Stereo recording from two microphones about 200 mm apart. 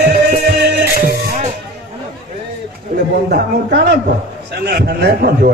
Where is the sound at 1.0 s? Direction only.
45° right (ahead or behind).